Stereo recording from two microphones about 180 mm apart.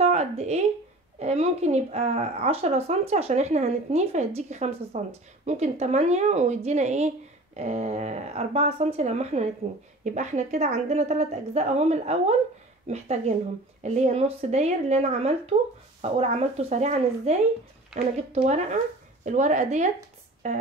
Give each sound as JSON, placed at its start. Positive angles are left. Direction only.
{"t": 0.0, "sound": "a woman's voice", "side_deg": -35}
{"t": 17.9, "sound": "a woman's voice", "side_deg": 0}
{"t": 18.3, "sound": "a woman's voice", "side_deg": -40}